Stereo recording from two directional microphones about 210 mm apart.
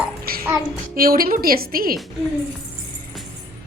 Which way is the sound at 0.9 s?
45° right (ahead or behind).